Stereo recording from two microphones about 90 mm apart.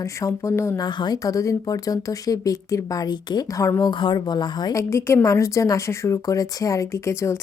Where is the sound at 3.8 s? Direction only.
60° left (ahead or behind).